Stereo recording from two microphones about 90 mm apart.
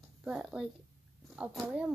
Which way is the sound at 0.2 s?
10° right (ahead or behind).